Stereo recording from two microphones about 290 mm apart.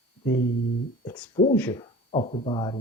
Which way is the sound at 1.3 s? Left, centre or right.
Left.